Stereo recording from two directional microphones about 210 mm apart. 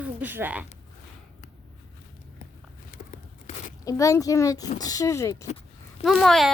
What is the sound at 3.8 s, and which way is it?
A child's voice, 15° left (ahead or behind).